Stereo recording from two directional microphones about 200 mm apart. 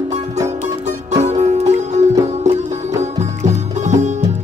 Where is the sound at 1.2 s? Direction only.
35° right (ahead or behind).